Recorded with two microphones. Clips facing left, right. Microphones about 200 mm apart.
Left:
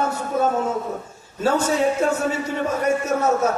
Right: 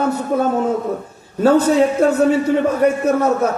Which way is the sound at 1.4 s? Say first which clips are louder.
Right 7 dB; 55° right (ahead or behind).